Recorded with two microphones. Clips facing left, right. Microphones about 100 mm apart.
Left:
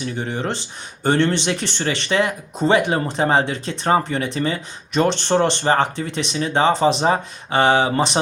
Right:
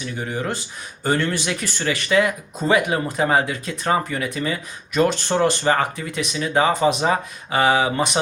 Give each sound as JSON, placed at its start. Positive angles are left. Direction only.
{"t": 0.0, "sound": "speech", "side_deg": 30}